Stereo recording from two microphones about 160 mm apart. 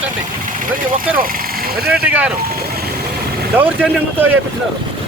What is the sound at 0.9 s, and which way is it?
Speech, 60° right (ahead or behind).